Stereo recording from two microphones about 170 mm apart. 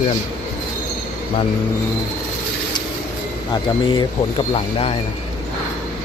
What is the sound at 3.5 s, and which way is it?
Speech, 30° left (ahead or behind).